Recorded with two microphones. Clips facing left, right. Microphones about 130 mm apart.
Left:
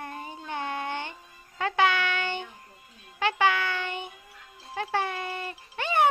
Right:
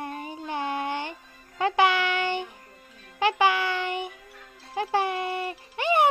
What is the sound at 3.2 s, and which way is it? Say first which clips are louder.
Music: right 2 dB; 15° right (ahead or behind).